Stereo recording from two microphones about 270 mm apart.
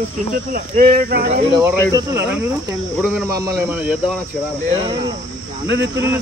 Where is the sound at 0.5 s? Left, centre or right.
Right.